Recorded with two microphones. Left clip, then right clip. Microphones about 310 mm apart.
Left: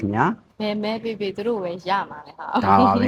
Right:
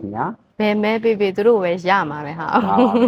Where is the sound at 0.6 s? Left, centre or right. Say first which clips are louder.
Right 11 dB; right.